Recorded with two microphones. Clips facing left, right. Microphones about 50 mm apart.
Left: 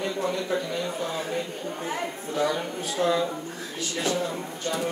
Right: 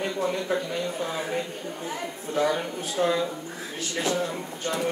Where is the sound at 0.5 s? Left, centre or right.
Right.